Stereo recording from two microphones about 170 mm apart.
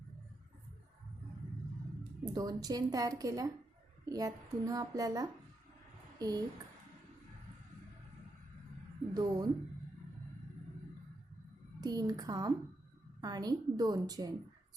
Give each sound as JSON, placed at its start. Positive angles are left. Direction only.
{"t": 2.2, "sound": "speech", "side_deg": -20}
{"t": 9.1, "sound": "speech", "side_deg": -20}
{"t": 11.8, "sound": "speech", "side_deg": -20}